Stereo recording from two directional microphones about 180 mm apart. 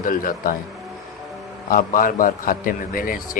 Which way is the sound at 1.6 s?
50° left (ahead or behind).